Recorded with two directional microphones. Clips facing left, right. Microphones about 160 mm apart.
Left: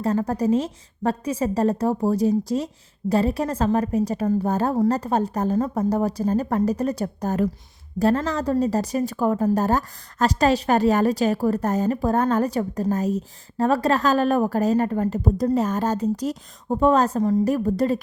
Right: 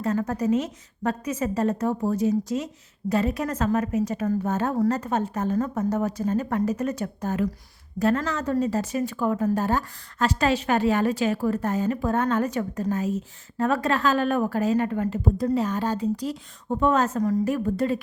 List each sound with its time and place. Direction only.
0.0 s a woman's voice: 35° left (ahead or behind)